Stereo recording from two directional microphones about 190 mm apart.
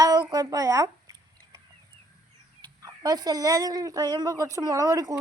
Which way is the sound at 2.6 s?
20° right (ahead or behind).